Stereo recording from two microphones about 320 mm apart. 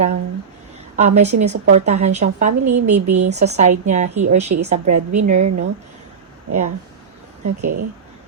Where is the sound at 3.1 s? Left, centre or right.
Right.